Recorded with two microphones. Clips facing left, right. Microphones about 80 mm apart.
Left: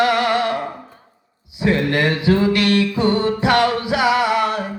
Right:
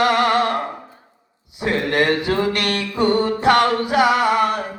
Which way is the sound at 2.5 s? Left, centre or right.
Right.